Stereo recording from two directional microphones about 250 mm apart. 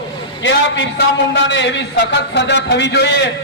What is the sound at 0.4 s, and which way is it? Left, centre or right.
A man's voice, left.